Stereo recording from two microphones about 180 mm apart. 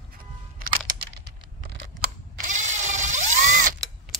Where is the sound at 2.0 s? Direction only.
45° right (ahead or behind).